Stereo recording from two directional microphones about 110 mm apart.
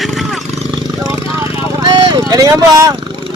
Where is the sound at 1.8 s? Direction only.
45° right (ahead or behind).